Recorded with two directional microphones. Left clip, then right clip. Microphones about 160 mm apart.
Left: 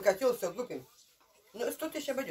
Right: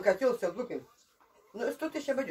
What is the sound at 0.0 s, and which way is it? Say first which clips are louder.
Speech: right 1 dB; centre (ahead or behind).